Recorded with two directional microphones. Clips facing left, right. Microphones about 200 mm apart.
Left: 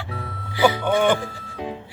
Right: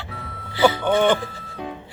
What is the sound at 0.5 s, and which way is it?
Music, 15° left (ahead or behind).